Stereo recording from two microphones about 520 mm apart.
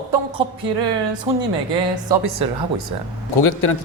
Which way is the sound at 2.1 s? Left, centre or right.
Right.